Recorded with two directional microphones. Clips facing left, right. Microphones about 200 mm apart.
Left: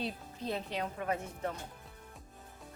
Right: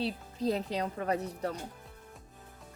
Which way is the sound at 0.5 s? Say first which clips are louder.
Right 4 dB; 35° right (ahead or behind).